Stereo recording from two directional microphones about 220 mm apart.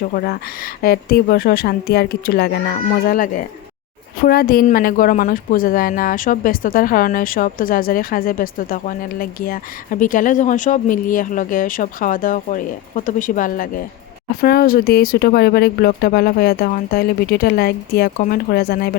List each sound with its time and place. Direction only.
0.0 s a woman's voice: 45° left (ahead or behind)